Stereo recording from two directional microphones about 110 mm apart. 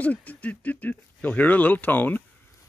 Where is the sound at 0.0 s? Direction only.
15° left (ahead or behind).